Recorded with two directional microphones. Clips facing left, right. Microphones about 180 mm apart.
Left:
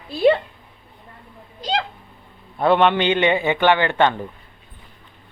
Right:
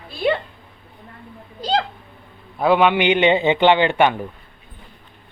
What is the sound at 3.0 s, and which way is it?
Speech, 15° right (ahead or behind).